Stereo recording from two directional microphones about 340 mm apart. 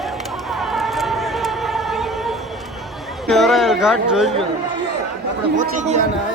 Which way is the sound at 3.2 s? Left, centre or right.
Centre.